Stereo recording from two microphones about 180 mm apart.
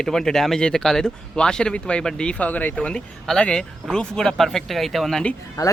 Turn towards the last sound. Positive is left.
turn(degrees=20)  # may be behind; listen again after turning